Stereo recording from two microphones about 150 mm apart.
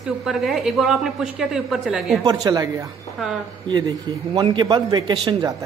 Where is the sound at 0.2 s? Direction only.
Centre (ahead or behind).